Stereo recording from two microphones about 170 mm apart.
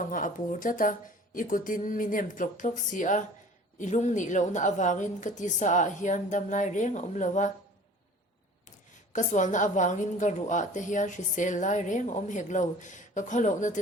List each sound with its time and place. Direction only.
0.0 s a woman's voice: 50° left (ahead or behind)
9.1 s a woman's voice: 45° left (ahead or behind)